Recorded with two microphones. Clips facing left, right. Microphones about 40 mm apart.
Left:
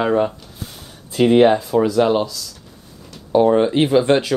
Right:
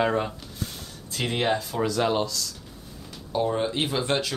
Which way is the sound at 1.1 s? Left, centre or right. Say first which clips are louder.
Left 13 dB; left.